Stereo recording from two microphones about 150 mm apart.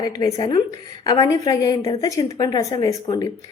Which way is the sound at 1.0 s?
25° left (ahead or behind).